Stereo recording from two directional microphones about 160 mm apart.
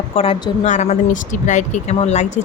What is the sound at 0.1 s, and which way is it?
Speech, 35° left (ahead or behind).